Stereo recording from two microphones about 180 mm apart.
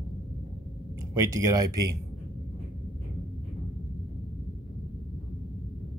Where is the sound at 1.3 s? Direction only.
20° right (ahead or behind).